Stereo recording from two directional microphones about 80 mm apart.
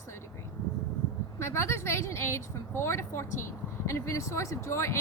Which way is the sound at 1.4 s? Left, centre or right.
Left.